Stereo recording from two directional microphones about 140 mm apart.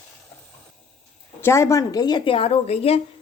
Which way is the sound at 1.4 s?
20° left (ahead or behind).